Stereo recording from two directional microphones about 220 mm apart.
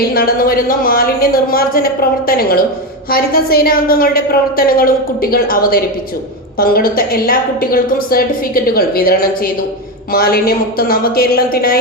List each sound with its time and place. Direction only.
0.1 s a woman's voice: 40° left (ahead or behind)